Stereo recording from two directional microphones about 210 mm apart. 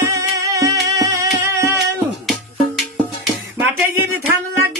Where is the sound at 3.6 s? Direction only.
10° right (ahead or behind).